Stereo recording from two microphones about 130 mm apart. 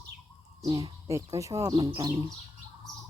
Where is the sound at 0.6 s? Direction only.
25° right (ahead or behind).